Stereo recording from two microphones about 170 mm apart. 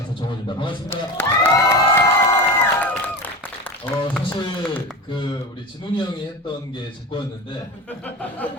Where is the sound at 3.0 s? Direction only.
10° left (ahead or behind).